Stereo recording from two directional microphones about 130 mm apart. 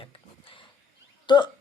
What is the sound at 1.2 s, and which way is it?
Hiccup, 35° left (ahead or behind).